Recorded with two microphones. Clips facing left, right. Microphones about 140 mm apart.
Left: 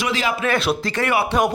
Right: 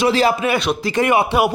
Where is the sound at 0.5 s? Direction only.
Centre (ahead or behind).